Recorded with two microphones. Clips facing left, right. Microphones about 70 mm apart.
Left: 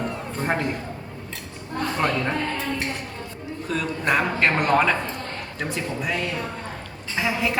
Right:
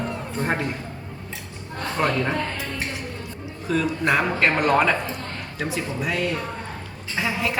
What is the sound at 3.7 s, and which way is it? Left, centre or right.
A woman's voice, centre.